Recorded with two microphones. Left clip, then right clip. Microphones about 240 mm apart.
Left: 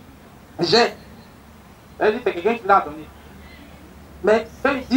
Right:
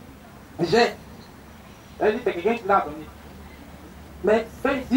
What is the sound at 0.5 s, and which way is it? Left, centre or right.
Speech, centre.